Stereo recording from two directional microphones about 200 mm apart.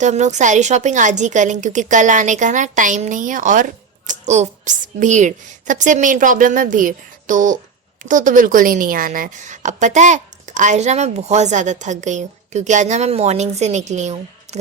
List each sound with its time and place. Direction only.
0.0 s a woman's voice: 35° right (ahead or behind)